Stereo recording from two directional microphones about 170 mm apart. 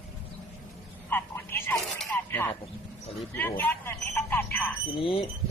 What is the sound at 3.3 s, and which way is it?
Speech, 10° left (ahead or behind).